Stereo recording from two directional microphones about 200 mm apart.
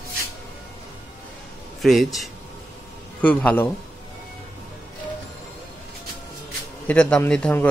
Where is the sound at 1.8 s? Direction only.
Centre (ahead or behind).